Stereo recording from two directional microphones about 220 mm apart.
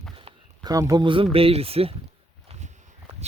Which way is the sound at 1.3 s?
25° right (ahead or behind).